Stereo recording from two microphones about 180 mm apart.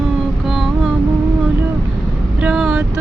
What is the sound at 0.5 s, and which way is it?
Music, centre (ahead or behind).